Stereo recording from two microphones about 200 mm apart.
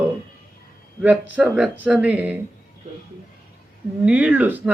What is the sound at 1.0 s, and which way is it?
Speech, 5° right (ahead or behind).